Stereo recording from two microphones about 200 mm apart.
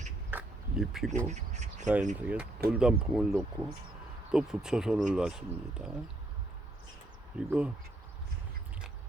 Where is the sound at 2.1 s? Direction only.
5° right (ahead or behind).